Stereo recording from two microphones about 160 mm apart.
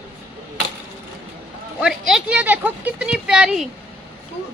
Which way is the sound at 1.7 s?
5° right (ahead or behind).